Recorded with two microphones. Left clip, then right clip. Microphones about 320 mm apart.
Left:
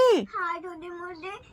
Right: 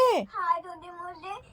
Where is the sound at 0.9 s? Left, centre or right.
Centre.